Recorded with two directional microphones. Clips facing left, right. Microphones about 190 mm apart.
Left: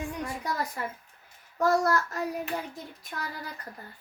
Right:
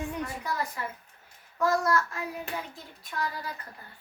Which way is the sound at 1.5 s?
40° left (ahead or behind).